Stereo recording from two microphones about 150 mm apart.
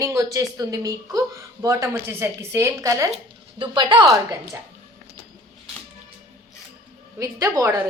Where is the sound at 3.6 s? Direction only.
30° right (ahead or behind).